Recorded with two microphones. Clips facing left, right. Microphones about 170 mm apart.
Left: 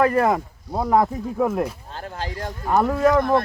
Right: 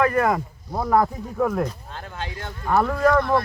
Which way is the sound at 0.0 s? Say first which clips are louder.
Left 2 dB; 30° left (ahead or behind).